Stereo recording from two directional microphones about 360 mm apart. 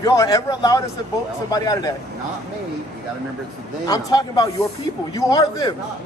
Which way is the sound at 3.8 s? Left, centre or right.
Centre.